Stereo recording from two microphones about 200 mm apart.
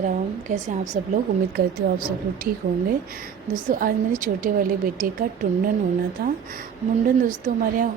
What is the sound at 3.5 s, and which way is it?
A woman's voice, 45° right (ahead or behind).